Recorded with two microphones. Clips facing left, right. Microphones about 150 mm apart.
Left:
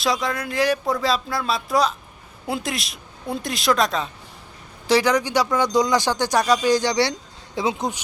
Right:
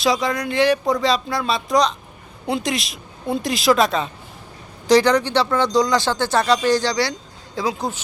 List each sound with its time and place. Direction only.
0.0 s speech: centre (ahead or behind)
6.9 s speech: 25° left (ahead or behind)